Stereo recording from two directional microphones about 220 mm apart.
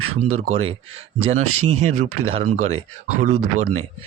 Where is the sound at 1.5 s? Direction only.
85° right.